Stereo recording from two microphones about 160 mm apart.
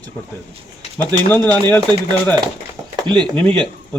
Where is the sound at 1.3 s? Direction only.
10° left (ahead or behind).